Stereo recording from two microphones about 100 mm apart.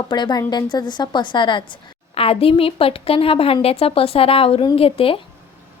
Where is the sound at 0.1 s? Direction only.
45° left (ahead or behind); by 5.2 s 65° left (ahead or behind).